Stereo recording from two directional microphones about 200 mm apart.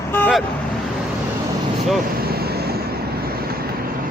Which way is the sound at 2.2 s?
50° right (ahead or behind).